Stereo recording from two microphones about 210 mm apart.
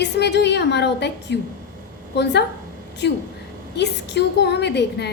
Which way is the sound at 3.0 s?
55° left (ahead or behind).